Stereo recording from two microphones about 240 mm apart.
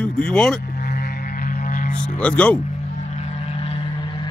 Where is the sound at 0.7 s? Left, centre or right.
Left.